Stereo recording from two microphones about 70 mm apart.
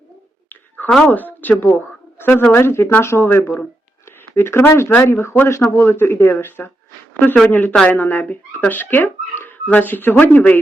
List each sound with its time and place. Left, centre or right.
0.9 s speech: centre
1.4 s speech: left